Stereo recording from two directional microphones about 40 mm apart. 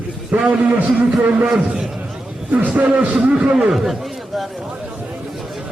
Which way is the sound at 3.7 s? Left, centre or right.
Centre.